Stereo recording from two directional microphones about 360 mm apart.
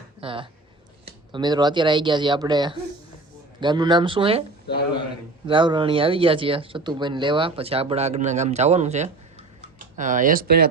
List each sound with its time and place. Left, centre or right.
0.2 s speech: centre
5.5 s speech: centre